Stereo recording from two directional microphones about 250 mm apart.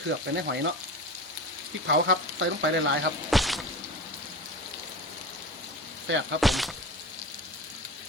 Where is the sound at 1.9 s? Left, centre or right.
Right.